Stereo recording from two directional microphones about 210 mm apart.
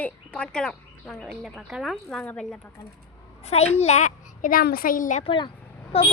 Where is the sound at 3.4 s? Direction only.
30° left (ahead or behind).